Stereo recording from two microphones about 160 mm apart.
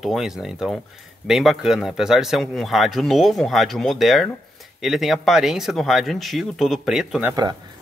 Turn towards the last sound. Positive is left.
turn(degrees=-25)  # may be behind; listen again after turning